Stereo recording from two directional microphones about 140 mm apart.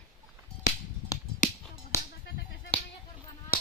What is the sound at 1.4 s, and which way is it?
Finger snapping, 65° left (ahead or behind).